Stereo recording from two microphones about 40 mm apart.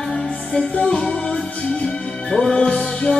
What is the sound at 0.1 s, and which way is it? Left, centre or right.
Music, left.